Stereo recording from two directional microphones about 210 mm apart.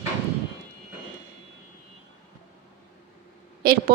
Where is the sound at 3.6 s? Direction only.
45° right (ahead or behind).